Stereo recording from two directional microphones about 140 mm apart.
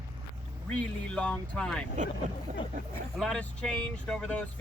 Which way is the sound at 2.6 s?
35° left (ahead or behind).